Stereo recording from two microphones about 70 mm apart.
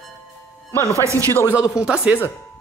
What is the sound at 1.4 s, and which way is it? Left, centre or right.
Speech, centre.